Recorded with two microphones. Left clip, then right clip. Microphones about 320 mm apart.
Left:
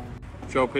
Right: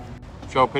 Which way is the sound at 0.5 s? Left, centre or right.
Right.